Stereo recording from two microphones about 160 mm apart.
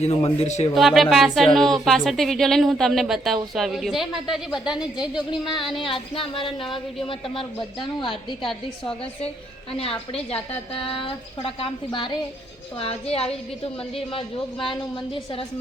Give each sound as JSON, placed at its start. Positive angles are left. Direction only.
{"t": 0.0, "sound": "a woman's voice", "side_deg": 35}
{"t": 0.7, "sound": "speech", "side_deg": 0}
{"t": 5.1, "sound": "a woman's voice", "side_deg": 30}
{"t": 8.4, "sound": "speech", "side_deg": 5}
{"t": 9.7, "sound": "a woman's voice", "side_deg": 35}